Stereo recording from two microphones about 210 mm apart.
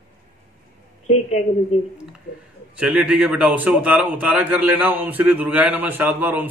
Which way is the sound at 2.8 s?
5° right (ahead or behind).